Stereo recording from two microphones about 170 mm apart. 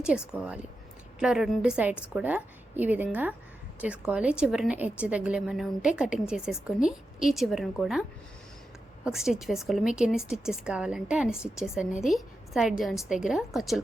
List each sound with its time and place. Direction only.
0.0 s a woman's voice: 5° right (ahead or behind)
9.0 s a woman's voice: 5° right (ahead or behind)